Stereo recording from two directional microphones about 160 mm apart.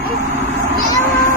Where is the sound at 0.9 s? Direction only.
15° left (ahead or behind).